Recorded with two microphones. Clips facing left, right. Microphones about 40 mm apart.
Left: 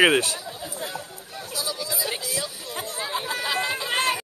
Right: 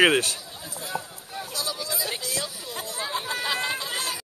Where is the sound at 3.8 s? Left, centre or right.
Left.